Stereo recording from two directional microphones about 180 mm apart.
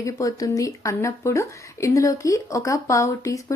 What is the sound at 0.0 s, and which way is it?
Speech, 20° left (ahead or behind).